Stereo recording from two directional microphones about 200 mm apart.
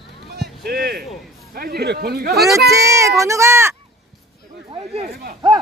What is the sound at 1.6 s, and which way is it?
Speech, 50° right (ahead or behind).